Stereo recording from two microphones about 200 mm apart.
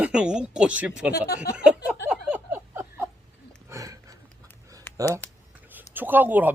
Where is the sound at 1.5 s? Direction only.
5° right (ahead or behind).